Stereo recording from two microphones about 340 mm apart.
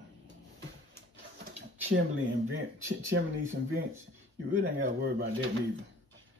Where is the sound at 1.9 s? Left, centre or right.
Right.